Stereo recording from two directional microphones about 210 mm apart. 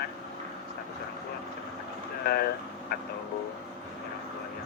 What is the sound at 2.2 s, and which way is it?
Speech, 50° left (ahead or behind).